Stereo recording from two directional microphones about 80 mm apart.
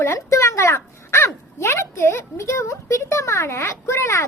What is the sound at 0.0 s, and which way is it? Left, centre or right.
A child's voice, left.